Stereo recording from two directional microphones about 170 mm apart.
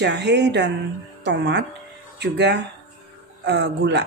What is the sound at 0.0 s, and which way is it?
A woman's voice, 90° right.